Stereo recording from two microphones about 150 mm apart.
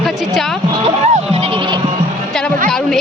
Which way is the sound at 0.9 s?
45° right (ahead or behind).